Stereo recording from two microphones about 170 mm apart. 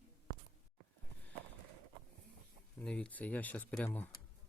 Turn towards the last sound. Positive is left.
turn(degrees=10)  # may be behind; listen again after turning